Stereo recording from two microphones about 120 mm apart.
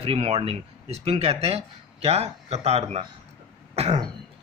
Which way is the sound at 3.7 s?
60° right (ahead or behind).